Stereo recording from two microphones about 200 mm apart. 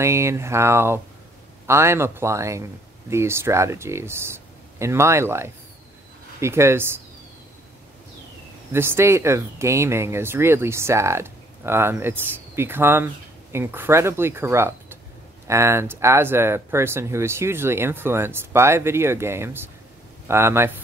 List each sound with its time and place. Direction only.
0.0 s speech: 15° right (ahead or behind)
8.7 s speech: 10° right (ahead or behind)